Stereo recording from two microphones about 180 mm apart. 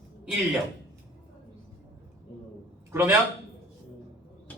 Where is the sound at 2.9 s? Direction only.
10° right (ahead or behind).